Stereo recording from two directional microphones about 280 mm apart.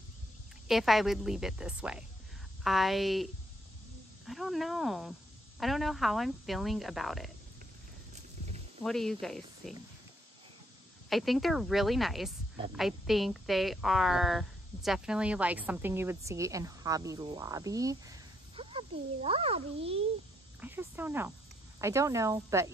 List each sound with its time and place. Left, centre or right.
0.7 s a woman's voice: centre
4.3 s a woman's voice: centre
8.1 s a sound: right
8.8 s a woman's voice: centre
11.1 s a woman's voice: centre; by 20.0 s right
20.6 s a woman's voice: centre